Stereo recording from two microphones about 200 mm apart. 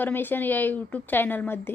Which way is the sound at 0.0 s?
10° left (ahead or behind).